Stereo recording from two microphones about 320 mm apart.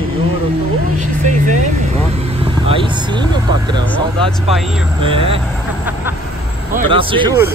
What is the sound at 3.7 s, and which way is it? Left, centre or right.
Speech, centre.